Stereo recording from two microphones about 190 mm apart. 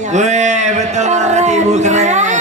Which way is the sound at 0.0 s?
40° right (ahead or behind).